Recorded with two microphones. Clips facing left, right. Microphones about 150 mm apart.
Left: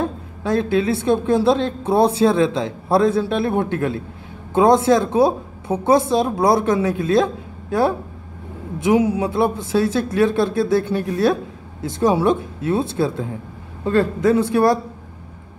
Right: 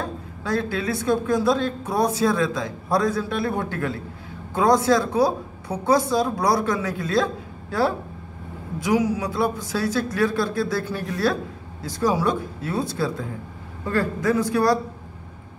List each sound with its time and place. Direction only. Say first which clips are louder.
0.0 s a woman's voice: left 6 dB; 20° left (ahead or behind)